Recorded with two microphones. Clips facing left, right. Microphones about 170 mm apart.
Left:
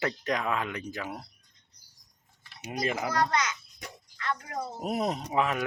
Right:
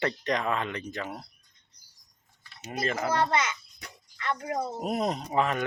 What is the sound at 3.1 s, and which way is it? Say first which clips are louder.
Babbling: right 2 dB; 25° right (ahead or behind).